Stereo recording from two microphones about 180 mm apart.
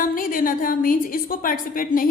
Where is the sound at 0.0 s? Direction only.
50° left (ahead or behind).